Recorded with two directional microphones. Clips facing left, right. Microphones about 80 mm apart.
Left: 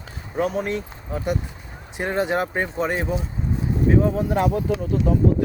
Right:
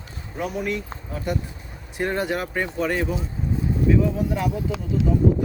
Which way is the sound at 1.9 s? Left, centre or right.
Left.